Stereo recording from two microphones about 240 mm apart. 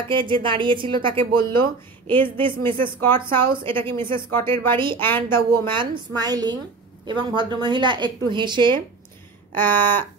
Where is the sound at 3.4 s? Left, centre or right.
Right.